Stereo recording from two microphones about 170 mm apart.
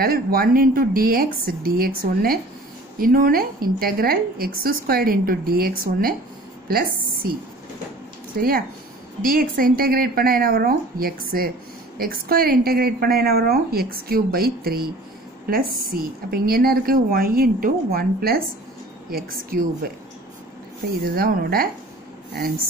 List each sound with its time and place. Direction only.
0.0 s a woman's voice: 60° right (ahead or behind)
8.4 s a woman's voice: 60° right (ahead or behind)
15.9 s a woman's voice: 60° right (ahead or behind)
21.0 s a woman's voice: 60° right (ahead or behind)